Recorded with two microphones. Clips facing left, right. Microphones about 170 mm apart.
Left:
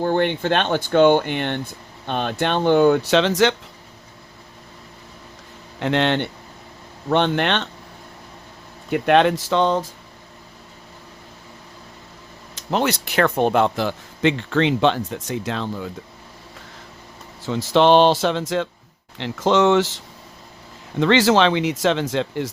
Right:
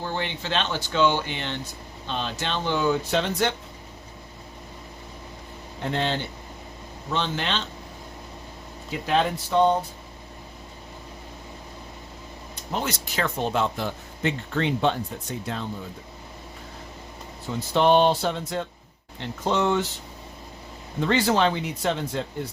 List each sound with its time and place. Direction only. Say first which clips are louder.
0.0 s speech: left 11 dB; 55° left (ahead or behind); by 3.5 s 90° left
5.8 s speech: left 7 dB; 80° left; by 7.7 s 65° left (ahead or behind)
8.9 s speech: left 8 dB; 70° left (ahead or behind); by 9.9 s 90° left
12.5 s speech: left 8 dB; 75° left (ahead or behind)
17.4 s speech: left 5 dB; 90° left
21.0 s speech: left 6 dB; 90° left